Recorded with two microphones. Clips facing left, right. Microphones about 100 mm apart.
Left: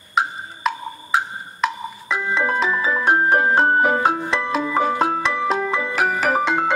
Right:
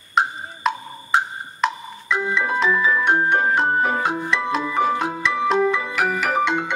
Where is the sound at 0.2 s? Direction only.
Centre (ahead or behind).